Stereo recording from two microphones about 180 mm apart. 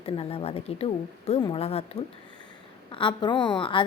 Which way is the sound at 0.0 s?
30° left (ahead or behind).